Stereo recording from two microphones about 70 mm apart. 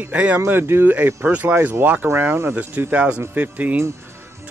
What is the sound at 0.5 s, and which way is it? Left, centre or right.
Speech, right.